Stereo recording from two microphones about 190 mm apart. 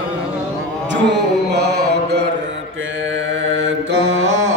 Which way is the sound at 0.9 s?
65° right (ahead or behind).